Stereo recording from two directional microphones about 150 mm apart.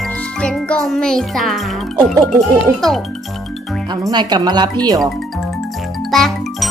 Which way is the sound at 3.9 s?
30° right (ahead or behind).